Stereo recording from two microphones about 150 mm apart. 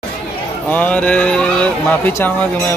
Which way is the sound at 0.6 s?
10° left (ahead or behind).